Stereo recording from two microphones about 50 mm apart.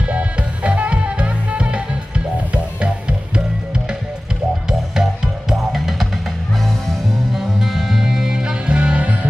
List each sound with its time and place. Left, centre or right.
0.0 s music: right; by 6.0 s centre
7.3 s music: centre; by 9.2 s right